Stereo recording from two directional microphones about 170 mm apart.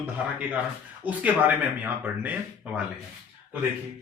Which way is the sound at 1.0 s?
10° right (ahead or behind).